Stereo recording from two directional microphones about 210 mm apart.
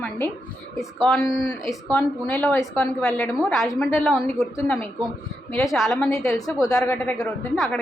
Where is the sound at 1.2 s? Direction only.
15° left (ahead or behind).